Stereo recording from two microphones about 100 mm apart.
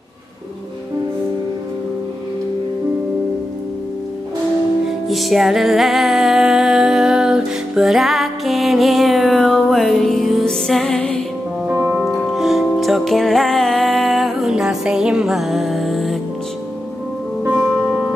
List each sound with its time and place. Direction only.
5.0 s music: centre (ahead or behind)
11.6 s music: 20° right (ahead or behind)
12.0 s music: 5° right (ahead or behind)
17.4 s music: 15° right (ahead or behind)